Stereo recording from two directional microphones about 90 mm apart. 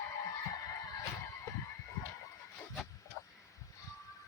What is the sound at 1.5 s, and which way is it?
Fowl, 35° left (ahead or behind).